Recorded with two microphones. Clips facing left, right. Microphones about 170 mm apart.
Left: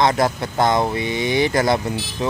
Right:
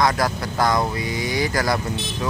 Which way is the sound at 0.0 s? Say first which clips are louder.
Left 3 dB; 25° left (ahead or behind).